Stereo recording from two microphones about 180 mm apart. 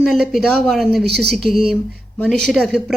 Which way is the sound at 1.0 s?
65° right (ahead or behind).